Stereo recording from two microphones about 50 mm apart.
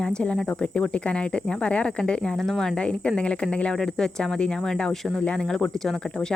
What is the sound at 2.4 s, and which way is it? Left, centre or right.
Speech, centre.